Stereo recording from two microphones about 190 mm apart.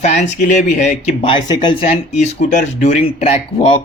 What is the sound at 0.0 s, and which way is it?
Speech, 35° left (ahead or behind).